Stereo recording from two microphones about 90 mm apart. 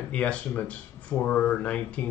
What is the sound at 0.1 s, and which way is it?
Speech, 15° left (ahead or behind).